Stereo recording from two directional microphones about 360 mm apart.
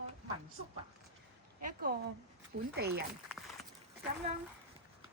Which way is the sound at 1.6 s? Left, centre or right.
Right.